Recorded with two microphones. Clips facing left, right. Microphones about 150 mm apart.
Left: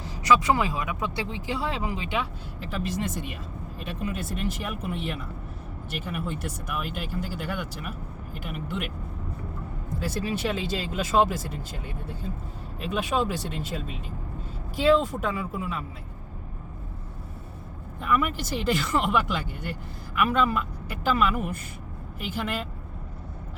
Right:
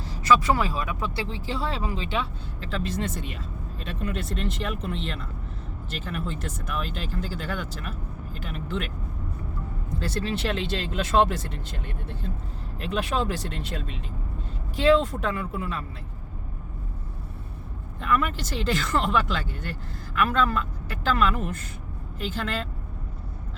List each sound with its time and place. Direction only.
0.0 s speech: 15° left (ahead or behind)
10.0 s speech: 10° left (ahead or behind)
12.9 s speech: 5° left (ahead or behind)
15.0 s speech: 5° left (ahead or behind)
18.0 s speech: 10° left (ahead or behind)